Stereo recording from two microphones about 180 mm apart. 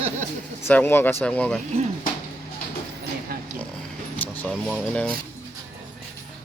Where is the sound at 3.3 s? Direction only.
55° right (ahead or behind).